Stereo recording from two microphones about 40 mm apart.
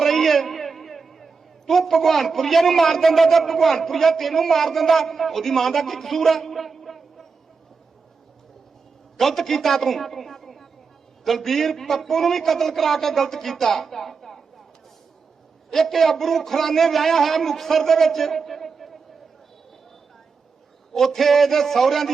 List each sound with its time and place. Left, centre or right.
0.0 s a man's voice: centre
9.1 s a man's voice: centre
15.7 s a man's voice: centre
20.9 s a man's voice: centre